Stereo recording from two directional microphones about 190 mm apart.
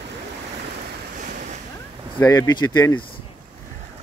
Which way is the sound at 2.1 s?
20° left (ahead or behind).